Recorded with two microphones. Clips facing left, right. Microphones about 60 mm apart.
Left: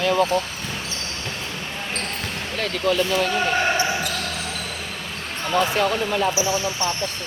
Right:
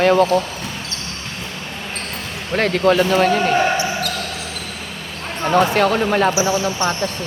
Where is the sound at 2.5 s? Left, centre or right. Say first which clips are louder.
Right 7 dB; right.